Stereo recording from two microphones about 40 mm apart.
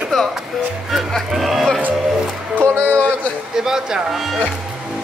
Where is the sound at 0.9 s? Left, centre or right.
Centre.